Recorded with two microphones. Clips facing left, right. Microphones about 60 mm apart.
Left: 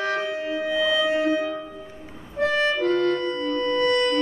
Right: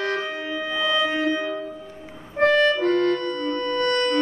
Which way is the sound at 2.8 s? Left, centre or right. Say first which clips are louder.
Right 1 dB; right.